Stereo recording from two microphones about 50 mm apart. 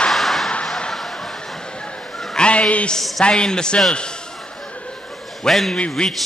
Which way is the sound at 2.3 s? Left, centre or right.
Left.